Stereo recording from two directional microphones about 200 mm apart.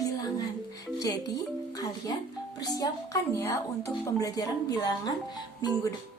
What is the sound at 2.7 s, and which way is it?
A woman's voice, 15° left (ahead or behind).